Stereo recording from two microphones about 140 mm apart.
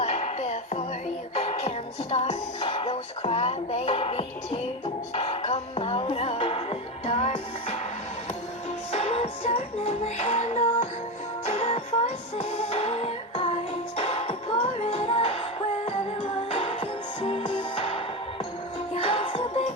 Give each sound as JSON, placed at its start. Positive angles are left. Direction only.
{"t": 0.0, "sound": "music", "side_deg": 45}
{"t": 8.9, "sound": "music", "side_deg": 45}